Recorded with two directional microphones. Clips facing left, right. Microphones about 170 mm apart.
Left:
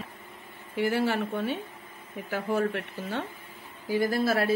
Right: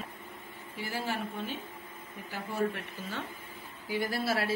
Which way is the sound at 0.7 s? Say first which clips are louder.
Left 9 dB; 65° left (ahead or behind).